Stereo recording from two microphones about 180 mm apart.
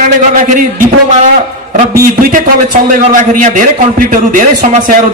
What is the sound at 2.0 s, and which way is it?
A man's voice, 50° right (ahead or behind).